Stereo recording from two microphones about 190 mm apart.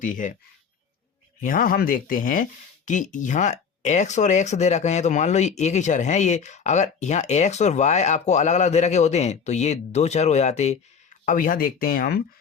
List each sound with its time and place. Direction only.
0.0 s speech: 45° left (ahead or behind)
1.4 s speech: 45° left (ahead or behind)
11.3 s speech: 45° left (ahead or behind)